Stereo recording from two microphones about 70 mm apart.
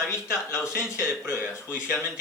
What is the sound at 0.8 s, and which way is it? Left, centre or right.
Speech, centre.